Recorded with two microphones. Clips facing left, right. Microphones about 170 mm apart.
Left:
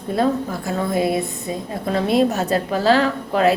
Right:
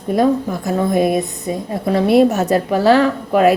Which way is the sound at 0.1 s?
15° right (ahead or behind).